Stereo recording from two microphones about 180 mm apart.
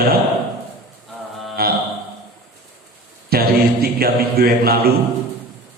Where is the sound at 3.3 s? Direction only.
60° right (ahead or behind).